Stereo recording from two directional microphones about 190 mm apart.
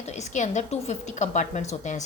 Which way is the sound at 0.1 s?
35° left (ahead or behind).